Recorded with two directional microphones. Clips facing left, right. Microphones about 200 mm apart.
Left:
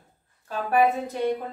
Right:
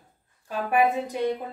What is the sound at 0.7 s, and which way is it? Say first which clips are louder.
Speech: left 1 dB; 15° right (ahead or behind).